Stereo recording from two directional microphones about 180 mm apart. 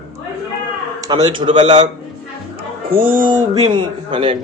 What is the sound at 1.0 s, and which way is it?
Speech, 20° right (ahead or behind).